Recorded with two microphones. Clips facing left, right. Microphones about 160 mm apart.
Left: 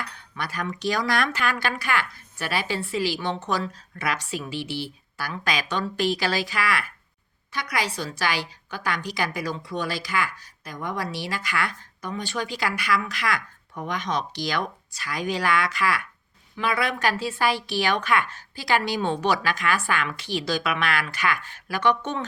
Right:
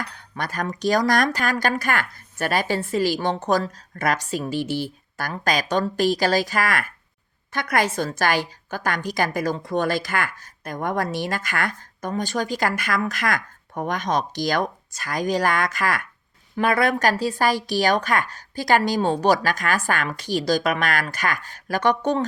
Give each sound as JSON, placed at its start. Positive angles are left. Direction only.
{"t": 0.0, "sound": "a woman's voice", "side_deg": -45}